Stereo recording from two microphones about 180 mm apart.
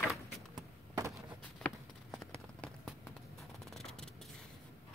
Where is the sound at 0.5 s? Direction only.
15° right (ahead or behind).